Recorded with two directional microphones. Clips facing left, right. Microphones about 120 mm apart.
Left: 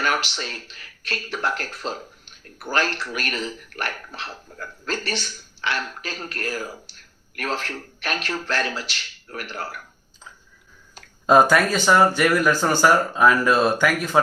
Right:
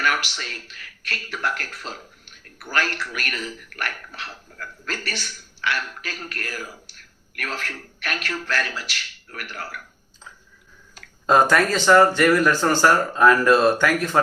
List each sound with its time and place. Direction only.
0.0 s speech: 25° left (ahead or behind)
11.3 s speech: 5° left (ahead or behind)